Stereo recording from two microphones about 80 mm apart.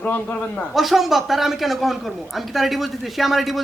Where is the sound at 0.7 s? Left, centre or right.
Centre.